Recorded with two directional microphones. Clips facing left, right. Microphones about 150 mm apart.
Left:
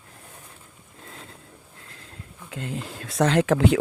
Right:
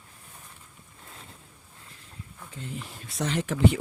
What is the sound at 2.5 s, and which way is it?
Speech, 90° left.